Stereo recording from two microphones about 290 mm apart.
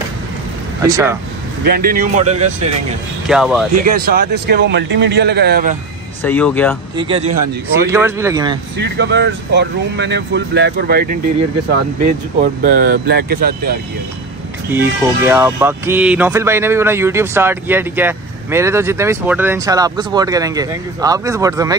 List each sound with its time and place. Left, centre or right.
0.8 s speech: centre
1.6 s speech: right
3.3 s speech: centre
3.9 s speech: right
6.2 s speech: centre
7.0 s speech: centre
8.7 s speech: right
12.6 s speech: right
14.7 s speech: centre